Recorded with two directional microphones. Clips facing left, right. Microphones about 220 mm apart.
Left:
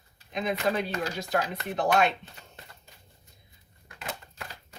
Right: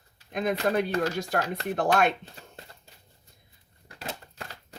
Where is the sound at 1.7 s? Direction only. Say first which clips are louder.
Right 1 dB; 50° right (ahead or behind).